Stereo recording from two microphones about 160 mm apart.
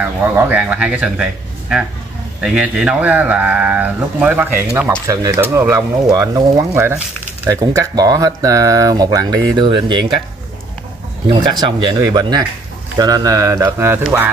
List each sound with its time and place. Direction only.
0.0 s a man's voice: 10° right (ahead or behind); by 10.1 s 30° right (ahead or behind)
11.6 s speech: 25° right (ahead or behind)